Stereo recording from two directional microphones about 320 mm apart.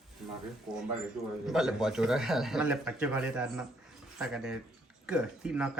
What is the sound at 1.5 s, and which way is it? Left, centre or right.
Speech, centre.